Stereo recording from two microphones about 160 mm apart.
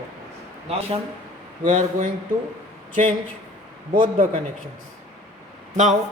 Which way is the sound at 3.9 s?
60° right (ahead or behind).